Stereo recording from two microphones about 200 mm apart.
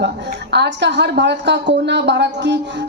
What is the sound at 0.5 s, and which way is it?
A woman's voice, 60° right (ahead or behind).